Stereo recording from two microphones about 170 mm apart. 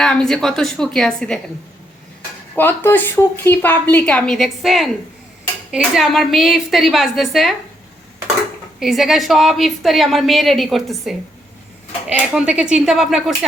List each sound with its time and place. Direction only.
0.0 s a woman's voice: 5° left (ahead or behind)
2.6 s a woman's voice: 10° left (ahead or behind)
8.8 s a woman's voice: centre (ahead or behind)